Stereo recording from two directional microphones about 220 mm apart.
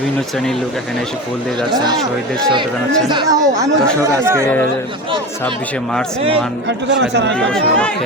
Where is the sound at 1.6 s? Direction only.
20° right (ahead or behind).